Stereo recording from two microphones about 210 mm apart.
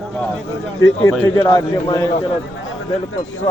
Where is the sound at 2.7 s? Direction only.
65° left (ahead or behind).